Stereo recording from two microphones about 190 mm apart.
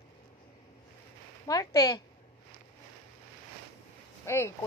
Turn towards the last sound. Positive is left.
turn(degrees=15)  # may be behind; listen again after turning